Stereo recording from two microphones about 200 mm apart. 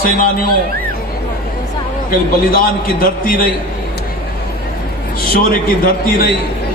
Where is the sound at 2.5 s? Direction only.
45° left (ahead or behind).